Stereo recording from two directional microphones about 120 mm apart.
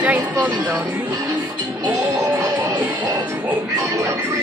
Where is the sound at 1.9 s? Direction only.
20° right (ahead or behind).